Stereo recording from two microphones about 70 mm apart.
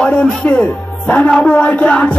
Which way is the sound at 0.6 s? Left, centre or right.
Centre.